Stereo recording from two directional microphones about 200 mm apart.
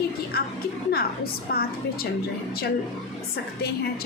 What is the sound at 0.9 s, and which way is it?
A woman's voice, 50° left (ahead or behind).